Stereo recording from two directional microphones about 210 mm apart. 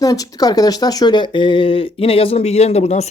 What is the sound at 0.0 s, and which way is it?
Speech, 15° left (ahead or behind).